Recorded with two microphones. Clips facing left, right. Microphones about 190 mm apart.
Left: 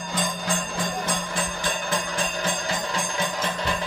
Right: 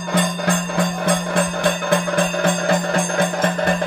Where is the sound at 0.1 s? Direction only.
60° right (ahead or behind).